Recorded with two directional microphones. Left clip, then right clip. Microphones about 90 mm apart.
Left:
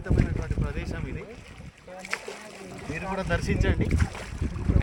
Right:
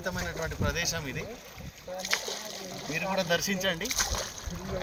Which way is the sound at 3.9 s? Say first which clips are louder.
Right 4 dB; 70° right (ahead or behind).